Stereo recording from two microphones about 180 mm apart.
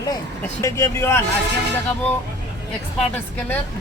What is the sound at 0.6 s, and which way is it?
Speech, 15° left (ahead or behind).